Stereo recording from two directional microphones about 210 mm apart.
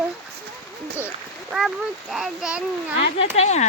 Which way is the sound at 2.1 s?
Centre (ahead or behind).